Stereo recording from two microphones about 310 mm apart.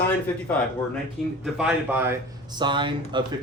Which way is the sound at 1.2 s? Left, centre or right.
Centre.